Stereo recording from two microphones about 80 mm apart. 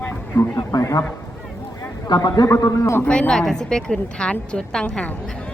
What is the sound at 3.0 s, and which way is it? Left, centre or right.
A woman's voice, centre.